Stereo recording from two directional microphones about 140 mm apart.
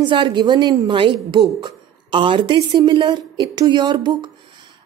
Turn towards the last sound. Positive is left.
turn(degrees=-30)  # may be behind; listen again after turning